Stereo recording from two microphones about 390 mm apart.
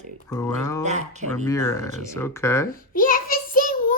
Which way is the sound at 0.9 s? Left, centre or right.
Centre.